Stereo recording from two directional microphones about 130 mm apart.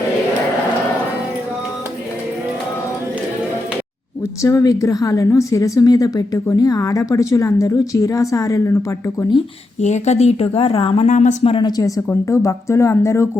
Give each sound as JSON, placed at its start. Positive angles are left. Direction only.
{"t": 4.4, "sound": "a woman's voice", "side_deg": 25}
{"t": 9.8, "sound": "a woman's voice", "side_deg": 60}
{"t": 11.1, "sound": "speech", "side_deg": 70}
{"t": 11.4, "sound": "a woman's voice", "side_deg": 40}
{"t": 11.8, "sound": "a woman's voice", "side_deg": 25}